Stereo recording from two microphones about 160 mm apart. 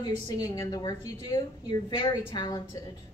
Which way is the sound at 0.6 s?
25° left (ahead or behind).